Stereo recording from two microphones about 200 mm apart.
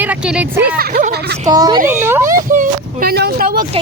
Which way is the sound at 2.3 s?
40° right (ahead or behind).